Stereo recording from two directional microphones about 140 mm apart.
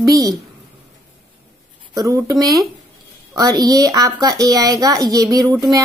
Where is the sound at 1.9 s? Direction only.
25° right (ahead or behind).